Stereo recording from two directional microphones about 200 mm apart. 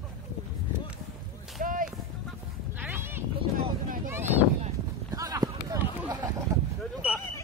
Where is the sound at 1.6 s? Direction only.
45° right (ahead or behind).